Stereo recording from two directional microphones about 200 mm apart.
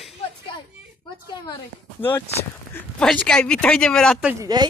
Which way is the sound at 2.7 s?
5° left (ahead or behind).